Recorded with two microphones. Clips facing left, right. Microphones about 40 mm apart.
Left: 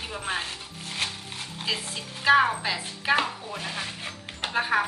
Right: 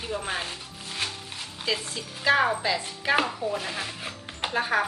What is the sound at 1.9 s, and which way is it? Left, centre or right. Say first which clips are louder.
A woman's voice: left 3 dB; centre.